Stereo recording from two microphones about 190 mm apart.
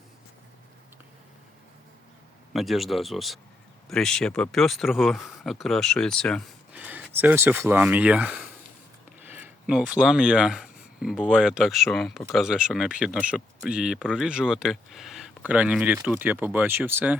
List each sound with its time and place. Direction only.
2.5 s speech: centre (ahead or behind)
6.7 s speech: 10° right (ahead or behind)